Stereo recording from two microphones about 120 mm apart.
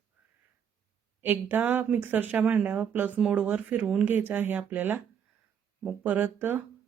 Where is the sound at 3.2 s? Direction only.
5° right (ahead or behind).